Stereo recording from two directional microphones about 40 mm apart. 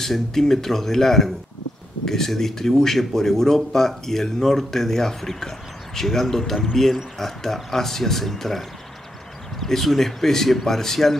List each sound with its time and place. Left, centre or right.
0.0 s speech: centre